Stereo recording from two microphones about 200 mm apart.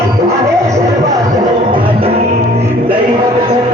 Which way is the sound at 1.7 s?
25° right (ahead or behind).